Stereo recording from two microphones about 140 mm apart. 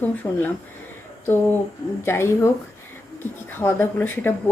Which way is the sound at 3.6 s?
15° left (ahead or behind).